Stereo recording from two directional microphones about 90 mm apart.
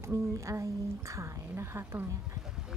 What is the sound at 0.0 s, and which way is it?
Speech, 35° right (ahead or behind).